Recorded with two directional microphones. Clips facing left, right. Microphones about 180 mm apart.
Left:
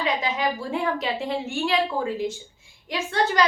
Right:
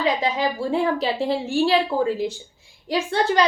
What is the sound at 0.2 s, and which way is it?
A woman's voice, 30° right (ahead or behind).